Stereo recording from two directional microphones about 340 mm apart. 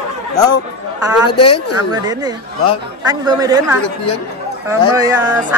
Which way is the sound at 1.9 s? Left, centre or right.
Centre.